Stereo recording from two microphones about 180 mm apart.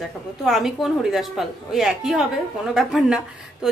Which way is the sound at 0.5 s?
Centre (ahead or behind).